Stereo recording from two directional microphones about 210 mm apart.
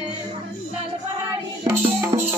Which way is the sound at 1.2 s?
15° right (ahead or behind).